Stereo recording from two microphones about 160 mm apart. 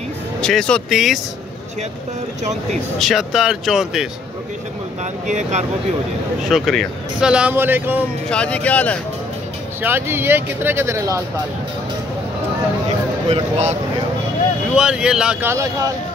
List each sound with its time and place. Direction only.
0.4 s speech: 5° left (ahead or behind)
3.0 s speech: centre (ahead or behind)
5.2 s speech: 50° right (ahead or behind)
6.5 s speech: centre (ahead or behind)
8.3 s speech: 10° left (ahead or behind)
9.8 s speech: 15° right (ahead or behind)
13.3 s speech: 45° right (ahead or behind)
14.8 s speech: 5° right (ahead or behind)